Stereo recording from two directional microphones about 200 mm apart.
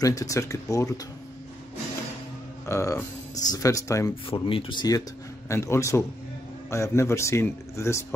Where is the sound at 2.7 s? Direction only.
15° left (ahead or behind).